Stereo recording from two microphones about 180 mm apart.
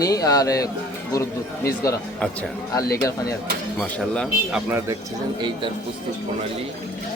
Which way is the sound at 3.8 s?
5° left (ahead or behind).